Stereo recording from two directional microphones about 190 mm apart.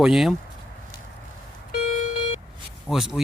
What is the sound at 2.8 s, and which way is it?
Speech, centre (ahead or behind).